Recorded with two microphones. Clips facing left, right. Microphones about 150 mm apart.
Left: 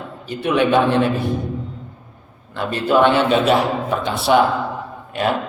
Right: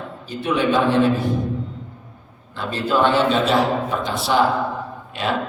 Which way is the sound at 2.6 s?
65° left (ahead or behind).